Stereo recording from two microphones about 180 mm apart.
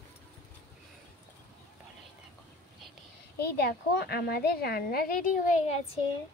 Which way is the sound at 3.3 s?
60° left (ahead or behind).